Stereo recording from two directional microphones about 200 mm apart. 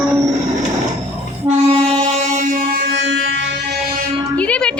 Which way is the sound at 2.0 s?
35° right (ahead or behind).